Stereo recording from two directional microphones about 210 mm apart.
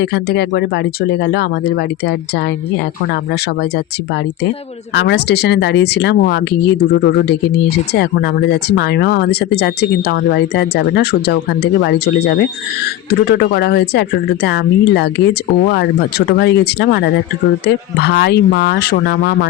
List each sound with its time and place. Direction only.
0.0 s speech: 50° left (ahead or behind)
4.9 s speech: 55° left (ahead or behind)
18.0 s speech: 50° left (ahead or behind)